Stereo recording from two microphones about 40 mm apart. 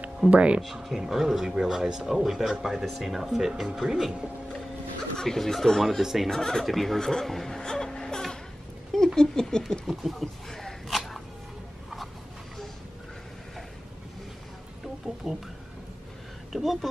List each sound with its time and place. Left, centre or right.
0.3 s speech: right
0.8 s speech: centre
5.1 s speech: centre
7.0 s music: centre
8.9 s speech: centre
9.8 s speech: centre
10.2 s speech: centre
10.9 s music: centre
15.0 s music: right
16.5 s speech: centre